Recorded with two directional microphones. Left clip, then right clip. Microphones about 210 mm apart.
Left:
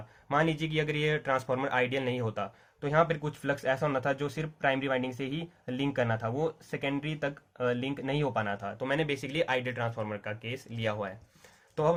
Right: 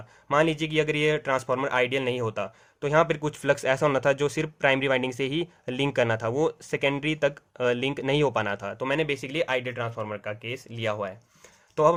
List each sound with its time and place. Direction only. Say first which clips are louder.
0.3 s speech: right 5 dB; 30° right (ahead or behind)